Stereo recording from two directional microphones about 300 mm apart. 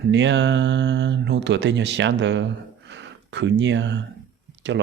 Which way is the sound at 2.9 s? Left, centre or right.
Right.